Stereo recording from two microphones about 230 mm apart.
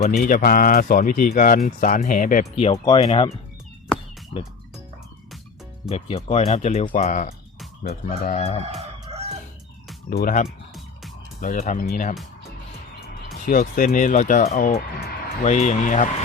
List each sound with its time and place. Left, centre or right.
0.2 s speech: left
5.9 s speech: left
8.6 s crowing: right
10.1 s speech: left
13.2 s speech: left